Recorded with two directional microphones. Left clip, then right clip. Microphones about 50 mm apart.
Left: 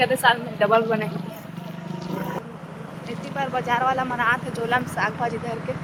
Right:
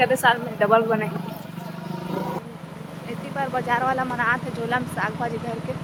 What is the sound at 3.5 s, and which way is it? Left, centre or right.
Speech, centre.